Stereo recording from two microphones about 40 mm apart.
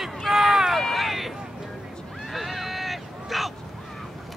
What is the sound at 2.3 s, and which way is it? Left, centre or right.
Vehicle, centre.